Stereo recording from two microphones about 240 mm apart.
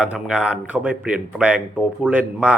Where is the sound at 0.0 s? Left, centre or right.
Centre.